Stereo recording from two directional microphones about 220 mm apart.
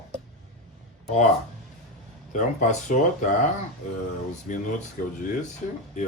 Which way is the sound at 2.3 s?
35° left (ahead or behind).